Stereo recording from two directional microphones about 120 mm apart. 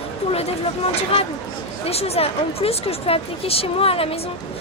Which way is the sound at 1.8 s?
60° left (ahead or behind).